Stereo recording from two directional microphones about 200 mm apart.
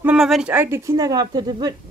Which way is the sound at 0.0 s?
5° right (ahead or behind).